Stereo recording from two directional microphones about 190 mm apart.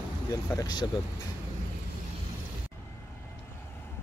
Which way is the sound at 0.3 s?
15° left (ahead or behind).